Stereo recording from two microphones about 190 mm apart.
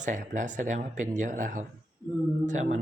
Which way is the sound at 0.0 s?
40° right (ahead or behind).